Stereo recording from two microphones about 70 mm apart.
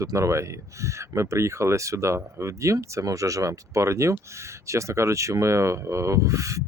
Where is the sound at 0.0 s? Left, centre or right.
Right.